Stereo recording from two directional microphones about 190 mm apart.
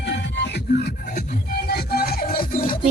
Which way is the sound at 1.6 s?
55° left (ahead or behind).